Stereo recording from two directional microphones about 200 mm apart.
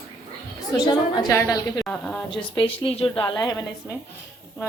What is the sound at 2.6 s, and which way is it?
A woman's voice, 25° left (ahead or behind).